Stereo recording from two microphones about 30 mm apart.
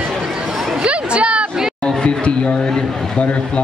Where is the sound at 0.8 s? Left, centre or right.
Right.